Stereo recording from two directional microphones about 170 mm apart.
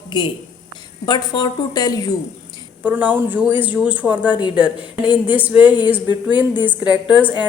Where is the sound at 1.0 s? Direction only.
25° left (ahead or behind).